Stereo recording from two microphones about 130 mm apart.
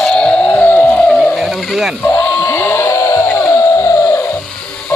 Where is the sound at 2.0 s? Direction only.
10° left (ahead or behind).